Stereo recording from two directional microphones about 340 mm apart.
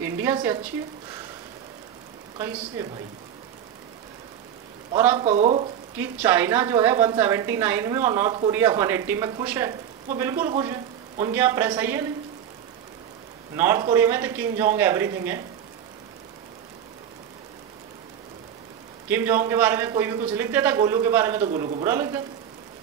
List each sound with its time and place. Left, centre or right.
0.0 s a woman's voice: centre
2.3 s a woman's voice: centre
4.9 s a woman's voice: centre
5.2 s a woman's voice: centre
5.9 s a woman's voice: centre
13.6 s a woman's voice: centre
19.0 s a woman's voice: centre